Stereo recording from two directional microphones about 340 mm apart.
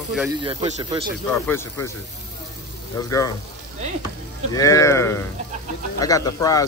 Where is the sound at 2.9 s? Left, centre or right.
Centre.